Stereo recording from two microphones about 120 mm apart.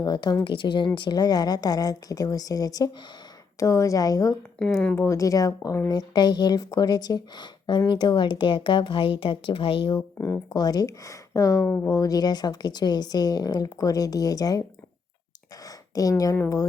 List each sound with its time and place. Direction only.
0.0 s speech: 35° left (ahead or behind)
4.6 s speech: 10° left (ahead or behind)
4.9 s speech: 25° left (ahead or behind); by 10.0 s 45° left (ahead or behind)
10.2 s speech: 20° left (ahead or behind)
10.5 s speech: 35° left (ahead or behind)
15.6 s speech: 30° left (ahead or behind)